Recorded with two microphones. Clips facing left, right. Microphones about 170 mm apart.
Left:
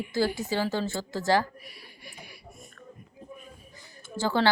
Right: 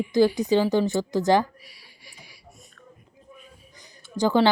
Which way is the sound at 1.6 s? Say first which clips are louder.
Left 5 dB; 55° left (ahead or behind).